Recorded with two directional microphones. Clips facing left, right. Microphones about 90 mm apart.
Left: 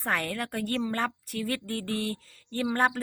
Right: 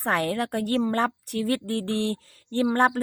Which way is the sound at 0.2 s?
45° right (ahead or behind).